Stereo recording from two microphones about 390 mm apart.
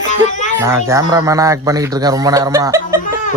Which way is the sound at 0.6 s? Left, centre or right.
Centre.